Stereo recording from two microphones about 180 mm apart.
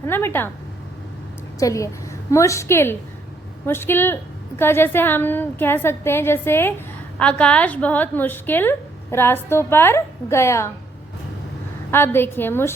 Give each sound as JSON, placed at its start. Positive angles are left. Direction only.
{"t": 0.0, "sound": "a woman's voice", "side_deg": 10}
{"t": 1.5, "sound": "a woman's voice", "side_deg": 15}
{"t": 11.9, "sound": "a woman's voice", "side_deg": 10}